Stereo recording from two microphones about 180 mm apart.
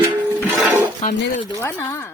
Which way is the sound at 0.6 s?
10° right (ahead or behind).